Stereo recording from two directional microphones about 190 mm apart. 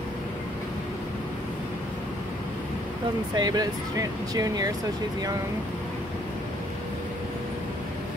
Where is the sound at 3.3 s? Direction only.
20° right (ahead or behind).